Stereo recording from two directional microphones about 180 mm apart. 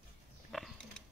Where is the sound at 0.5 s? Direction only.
Centre (ahead or behind).